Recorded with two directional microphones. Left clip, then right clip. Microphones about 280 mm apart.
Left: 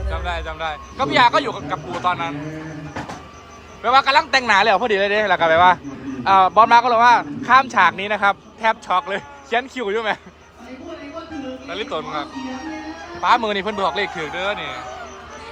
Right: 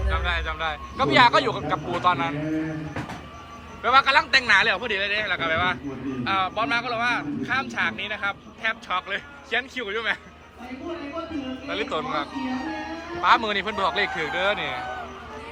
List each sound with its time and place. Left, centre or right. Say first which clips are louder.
0.1 s a man's voice: even; centre
3.8 s speech: left 3 dB; centre
11.7 s a man's voice: left 1 dB; centre